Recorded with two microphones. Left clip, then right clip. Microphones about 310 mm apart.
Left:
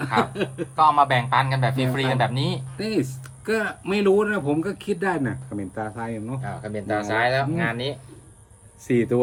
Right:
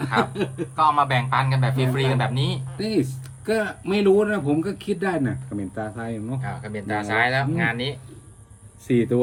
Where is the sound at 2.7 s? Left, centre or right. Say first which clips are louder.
Right 3 dB; centre.